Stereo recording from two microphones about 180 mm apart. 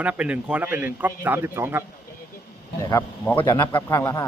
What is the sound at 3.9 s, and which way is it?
Speech, 15° left (ahead or behind).